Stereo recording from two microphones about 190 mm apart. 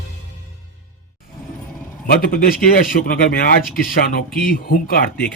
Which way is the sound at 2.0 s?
50° left (ahead or behind).